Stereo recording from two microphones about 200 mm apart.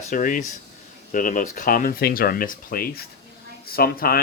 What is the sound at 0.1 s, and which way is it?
Speech, 40° left (ahead or behind).